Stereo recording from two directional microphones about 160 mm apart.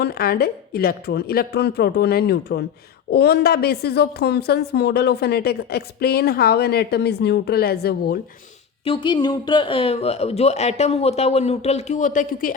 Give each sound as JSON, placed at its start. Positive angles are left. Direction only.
{"t": 0.0, "sound": "a woman's voice", "side_deg": 75}
{"t": 8.8, "sound": "speech", "side_deg": 30}